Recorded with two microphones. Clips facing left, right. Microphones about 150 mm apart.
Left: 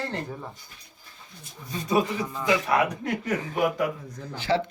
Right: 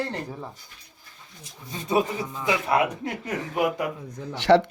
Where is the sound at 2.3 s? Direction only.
20° right (ahead or behind).